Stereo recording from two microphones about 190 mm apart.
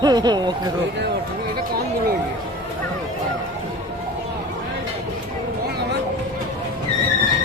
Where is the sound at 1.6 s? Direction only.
55° right (ahead or behind).